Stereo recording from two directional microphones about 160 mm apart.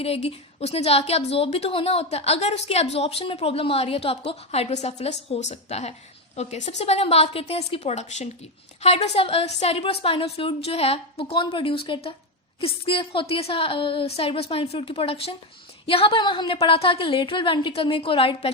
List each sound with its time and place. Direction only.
0.0 s a woman's voice: 40° left (ahead or behind)